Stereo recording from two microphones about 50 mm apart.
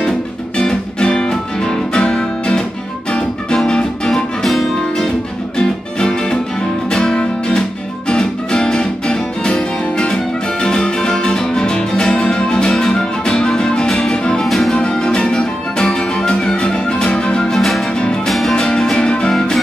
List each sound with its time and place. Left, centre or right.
0.6 s music: centre
14.4 s music: centre
14.8 s music: centre
19.3 s music: centre